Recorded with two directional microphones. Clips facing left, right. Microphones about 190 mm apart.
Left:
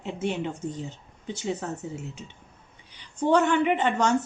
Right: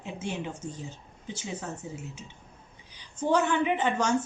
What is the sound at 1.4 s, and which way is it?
Speech, 60° left (ahead or behind).